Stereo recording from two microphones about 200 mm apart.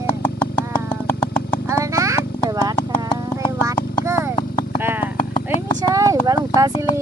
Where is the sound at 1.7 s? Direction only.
15° right (ahead or behind).